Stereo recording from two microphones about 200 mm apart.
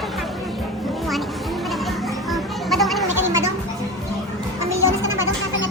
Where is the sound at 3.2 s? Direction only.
15° right (ahead or behind).